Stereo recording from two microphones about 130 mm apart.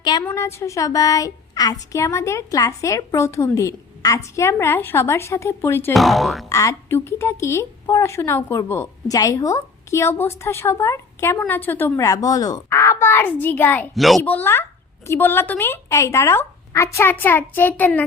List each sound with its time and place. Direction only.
0.0 s a woman's voice: 35° left (ahead or behind)
0.3 s speech: 20° left (ahead or behind)
5.9 s speech: centre (ahead or behind)
6.5 s speech: 25° left (ahead or behind)
11.9 s speech: 25° left (ahead or behind)
13.9 s speech: centre (ahead or behind)
14.3 s a woman's voice: 15° left (ahead or behind)